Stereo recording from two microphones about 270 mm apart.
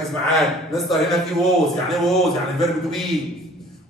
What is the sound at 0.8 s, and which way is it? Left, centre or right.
A man's voice, centre.